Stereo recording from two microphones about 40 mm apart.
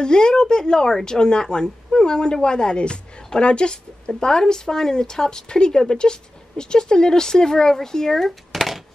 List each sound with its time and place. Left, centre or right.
0.0 s a woman's voice: centre